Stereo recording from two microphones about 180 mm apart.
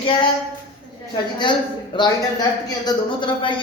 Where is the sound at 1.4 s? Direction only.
25° left (ahead or behind).